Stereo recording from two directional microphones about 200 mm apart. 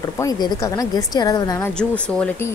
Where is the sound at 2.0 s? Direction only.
5° left (ahead or behind).